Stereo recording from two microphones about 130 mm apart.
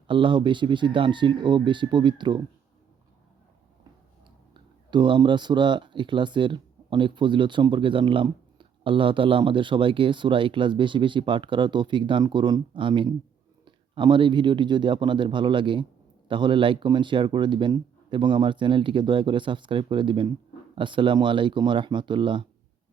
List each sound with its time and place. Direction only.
0.1 s speech: 40° right (ahead or behind)
4.5 s speech: 35° right (ahead or behind)